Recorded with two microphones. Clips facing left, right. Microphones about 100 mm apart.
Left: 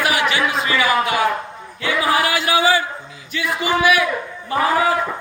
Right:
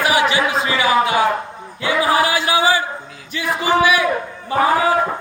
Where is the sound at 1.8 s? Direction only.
30° right (ahead or behind).